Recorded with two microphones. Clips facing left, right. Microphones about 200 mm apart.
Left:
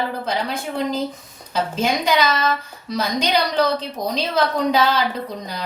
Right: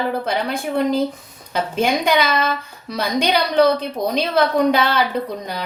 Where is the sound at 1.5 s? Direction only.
55° right (ahead or behind).